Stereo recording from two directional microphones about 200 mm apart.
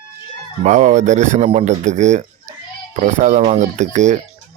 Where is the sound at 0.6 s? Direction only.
35° right (ahead or behind).